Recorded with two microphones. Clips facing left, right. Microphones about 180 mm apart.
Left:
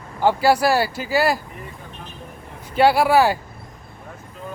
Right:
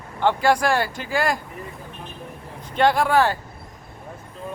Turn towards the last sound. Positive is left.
turn(degrees=10)  # may be behind; listen again after turning